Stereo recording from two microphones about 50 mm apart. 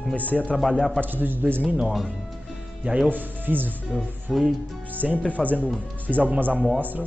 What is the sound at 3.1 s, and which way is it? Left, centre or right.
Speech, right.